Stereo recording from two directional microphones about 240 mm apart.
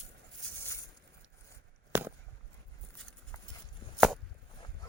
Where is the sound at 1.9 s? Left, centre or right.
Centre.